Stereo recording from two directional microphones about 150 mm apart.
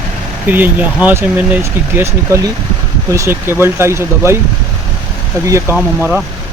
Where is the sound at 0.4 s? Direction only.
10° right (ahead or behind).